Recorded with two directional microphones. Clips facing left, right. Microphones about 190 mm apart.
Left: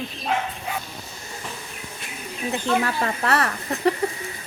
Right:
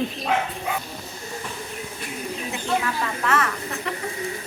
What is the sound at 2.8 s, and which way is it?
A woman's voice, 40° left (ahead or behind).